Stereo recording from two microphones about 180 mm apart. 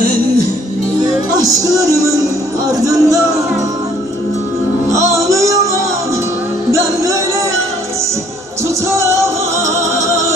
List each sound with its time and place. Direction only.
2.8 s speech: 20° right (ahead or behind)
5.1 s music: 15° right (ahead or behind)
8.9 s music: 15° right (ahead or behind)